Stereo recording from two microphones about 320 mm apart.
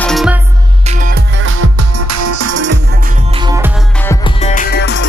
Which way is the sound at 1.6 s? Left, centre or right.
Right.